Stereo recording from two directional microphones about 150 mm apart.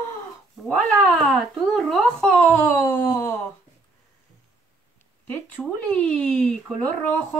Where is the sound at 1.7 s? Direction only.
5° left (ahead or behind).